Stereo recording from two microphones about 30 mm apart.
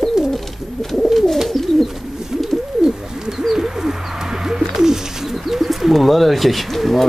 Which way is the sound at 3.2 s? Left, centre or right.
Centre.